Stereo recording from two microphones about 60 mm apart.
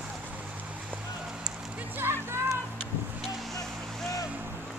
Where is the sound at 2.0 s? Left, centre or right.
Right.